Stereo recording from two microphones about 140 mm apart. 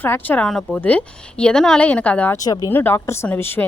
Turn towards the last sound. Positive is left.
turn(degrees=15)  # may be behind; listen again after turning